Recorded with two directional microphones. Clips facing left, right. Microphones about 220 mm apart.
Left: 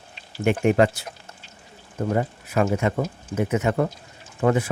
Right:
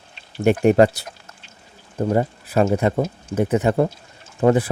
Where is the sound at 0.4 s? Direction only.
40° right (ahead or behind).